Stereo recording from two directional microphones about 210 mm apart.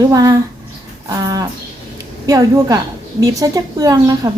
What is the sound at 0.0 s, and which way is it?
A woman's voice, 15° right (ahead or behind).